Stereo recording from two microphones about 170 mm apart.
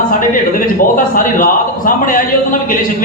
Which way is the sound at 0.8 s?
50° left (ahead or behind).